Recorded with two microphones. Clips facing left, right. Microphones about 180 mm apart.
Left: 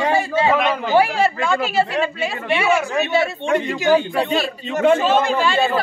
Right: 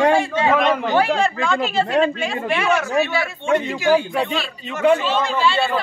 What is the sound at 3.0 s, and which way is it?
A man's voice, 20° left (ahead or behind).